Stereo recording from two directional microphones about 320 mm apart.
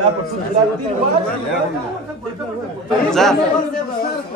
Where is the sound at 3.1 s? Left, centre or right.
Centre.